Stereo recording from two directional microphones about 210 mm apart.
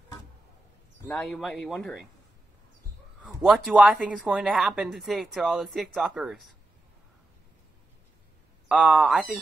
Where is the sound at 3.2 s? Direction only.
5° right (ahead or behind).